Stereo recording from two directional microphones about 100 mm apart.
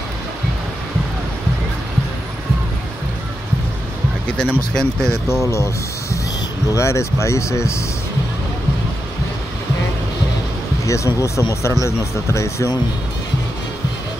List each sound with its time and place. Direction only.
4.3 s speech: 10° left (ahead or behind)
6.7 s speech: 30° left (ahead or behind)
10.9 s speech: 30° left (ahead or behind)